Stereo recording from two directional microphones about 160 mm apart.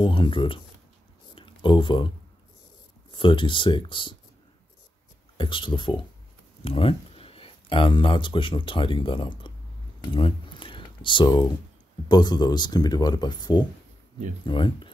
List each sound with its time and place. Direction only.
0.0 s speech: 30° left (ahead or behind)
1.3 s a sound: 30° left (ahead or behind)
3.1 s speech: 30° left (ahead or behind)
5.4 s speech: 30° left (ahead or behind)
10.1 s a sound: 30° left (ahead or behind)
12.1 s speech: 25° left (ahead or behind)